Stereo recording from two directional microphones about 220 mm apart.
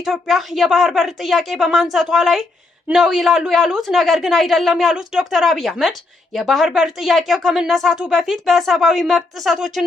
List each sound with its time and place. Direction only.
0.0 s a woman's voice: centre (ahead or behind)